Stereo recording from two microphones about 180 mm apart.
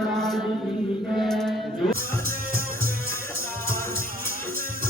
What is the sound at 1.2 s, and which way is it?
Mantra, centre (ahead or behind).